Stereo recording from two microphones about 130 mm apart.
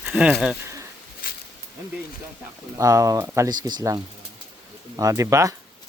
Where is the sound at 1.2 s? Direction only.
90° left.